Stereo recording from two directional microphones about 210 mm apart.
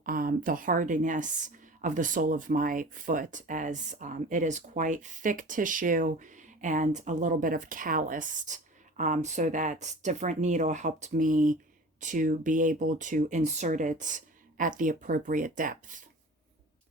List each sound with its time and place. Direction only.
0.0 s a woman's voice: 45° right (ahead or behind)